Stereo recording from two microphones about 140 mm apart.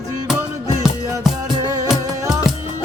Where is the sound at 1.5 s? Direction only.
25° right (ahead or behind).